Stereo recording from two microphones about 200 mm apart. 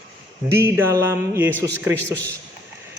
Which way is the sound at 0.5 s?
15° right (ahead or behind).